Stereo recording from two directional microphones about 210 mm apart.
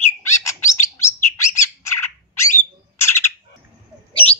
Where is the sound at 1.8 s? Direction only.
10° left (ahead or behind).